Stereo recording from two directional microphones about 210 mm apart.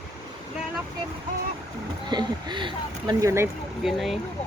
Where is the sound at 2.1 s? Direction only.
20° right (ahead or behind).